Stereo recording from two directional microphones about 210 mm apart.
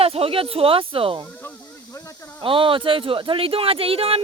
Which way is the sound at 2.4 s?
25° right (ahead or behind).